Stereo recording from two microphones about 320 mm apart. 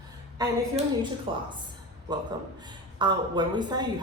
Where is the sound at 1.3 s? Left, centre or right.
Centre.